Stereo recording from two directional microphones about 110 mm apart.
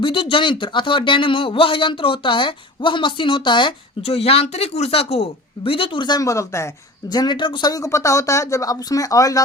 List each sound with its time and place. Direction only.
0.0 s a man's voice: 55° left (ahead or behind)
4.0 s speech: 65° left (ahead or behind); by 6.7 s 25° left (ahead or behind)
7.1 s speech: 40° left (ahead or behind)